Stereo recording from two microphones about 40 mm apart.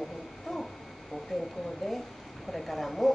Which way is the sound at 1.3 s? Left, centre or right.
Centre.